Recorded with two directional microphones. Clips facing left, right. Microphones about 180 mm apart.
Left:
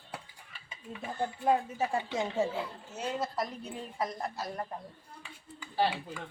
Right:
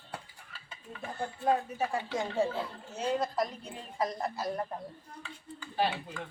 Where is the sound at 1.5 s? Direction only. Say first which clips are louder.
Even; 20° left (ahead or behind).